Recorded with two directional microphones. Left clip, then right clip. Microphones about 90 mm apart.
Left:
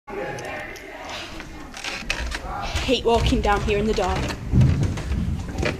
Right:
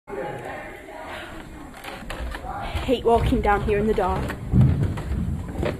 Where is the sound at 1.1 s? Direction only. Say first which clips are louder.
Left 2 dB; centre (ahead or behind).